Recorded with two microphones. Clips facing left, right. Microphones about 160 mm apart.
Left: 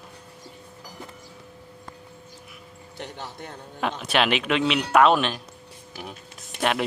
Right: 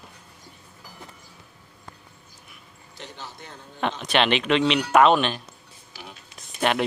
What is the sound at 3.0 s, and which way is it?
Speech, 60° left (ahead or behind).